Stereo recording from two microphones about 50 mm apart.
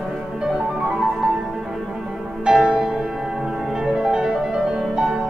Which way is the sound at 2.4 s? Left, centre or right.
Centre.